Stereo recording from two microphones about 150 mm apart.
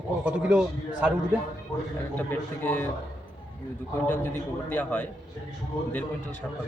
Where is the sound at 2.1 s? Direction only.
10° left (ahead or behind).